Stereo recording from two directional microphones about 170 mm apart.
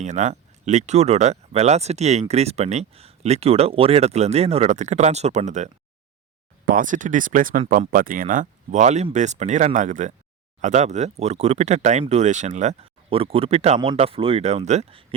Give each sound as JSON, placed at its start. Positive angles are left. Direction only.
{"t": 0.0, "sound": "speech", "side_deg": -45}